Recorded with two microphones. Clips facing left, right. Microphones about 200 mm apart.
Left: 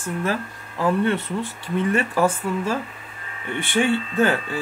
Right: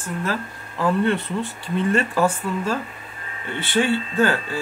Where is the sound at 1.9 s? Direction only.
10° left (ahead or behind).